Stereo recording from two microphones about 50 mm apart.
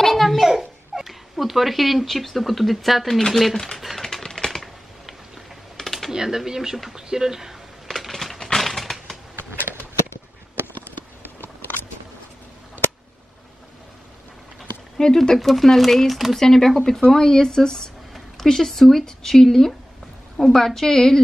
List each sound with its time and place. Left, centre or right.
0.0 s babbling: centre
0.5 s speech: centre
3.7 s typewriter: centre
5.8 s computer keyboard: centre
6.1 s speech: centre
8.1 s a sound: centre
9.3 s a sound: right
15.0 s speech: centre